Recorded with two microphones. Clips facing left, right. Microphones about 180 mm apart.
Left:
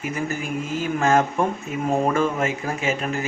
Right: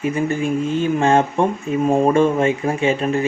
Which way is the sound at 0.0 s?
30° right (ahead or behind).